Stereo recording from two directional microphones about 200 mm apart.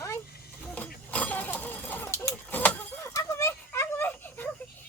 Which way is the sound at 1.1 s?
5° left (ahead or behind).